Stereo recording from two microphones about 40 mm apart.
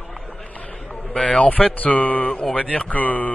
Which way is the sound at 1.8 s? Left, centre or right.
Left.